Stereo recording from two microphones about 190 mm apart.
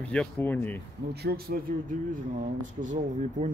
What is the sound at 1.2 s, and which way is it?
Speech, 55° right (ahead or behind).